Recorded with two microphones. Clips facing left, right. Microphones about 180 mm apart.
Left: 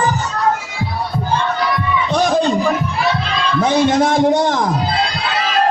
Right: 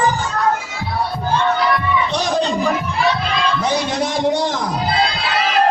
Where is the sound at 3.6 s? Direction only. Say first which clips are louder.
Left 6 dB; 50° left (ahead or behind).